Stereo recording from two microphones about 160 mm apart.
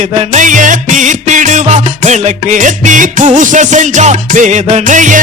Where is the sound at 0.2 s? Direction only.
50° right (ahead or behind).